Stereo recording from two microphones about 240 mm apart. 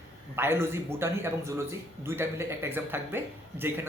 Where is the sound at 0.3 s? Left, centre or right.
Centre.